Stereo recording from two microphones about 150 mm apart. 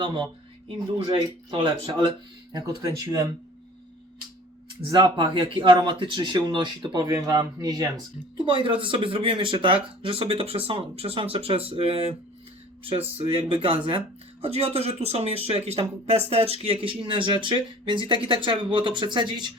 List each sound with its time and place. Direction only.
0.9 s speech: 35° right (ahead or behind)
4.9 s speech: 25° right (ahead or behind)